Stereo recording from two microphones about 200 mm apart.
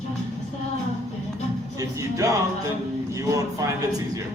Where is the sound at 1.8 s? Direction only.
15° right (ahead or behind).